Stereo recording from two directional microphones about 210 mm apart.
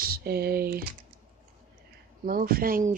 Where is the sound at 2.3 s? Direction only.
45° right (ahead or behind).